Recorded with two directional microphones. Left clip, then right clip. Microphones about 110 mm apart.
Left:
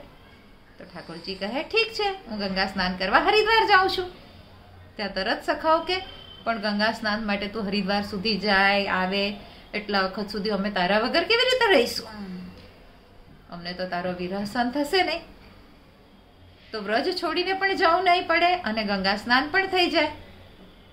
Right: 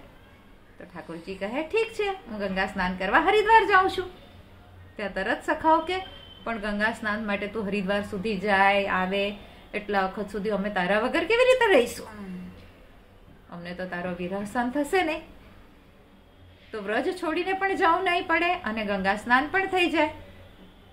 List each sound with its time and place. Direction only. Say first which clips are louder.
0.9 s a woman's voice: left 2 dB; 25° left (ahead or behind)
13.5 s a woman's voice: left 4 dB; 25° left (ahead or behind)
16.7 s a woman's voice: left 2 dB; 20° left (ahead or behind)